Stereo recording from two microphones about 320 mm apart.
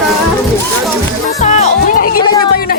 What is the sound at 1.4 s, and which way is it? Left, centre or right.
Music, left.